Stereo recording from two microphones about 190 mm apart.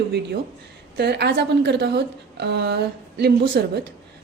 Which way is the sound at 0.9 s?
60° right (ahead or behind).